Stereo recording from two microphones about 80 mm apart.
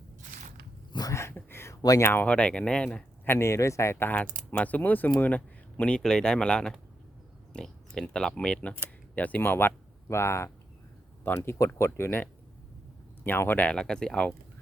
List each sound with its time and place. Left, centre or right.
1.1 s a sound: left
1.7 s speech: left
2.0 s speech: left
3.2 s speech: left
3.9 s speech: left
13.2 s speech: left
13.7 s speech: centre